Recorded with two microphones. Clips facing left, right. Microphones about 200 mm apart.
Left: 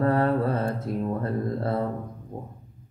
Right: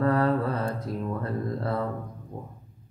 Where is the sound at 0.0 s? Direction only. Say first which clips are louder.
Left 1 dB; 30° left (ahead or behind).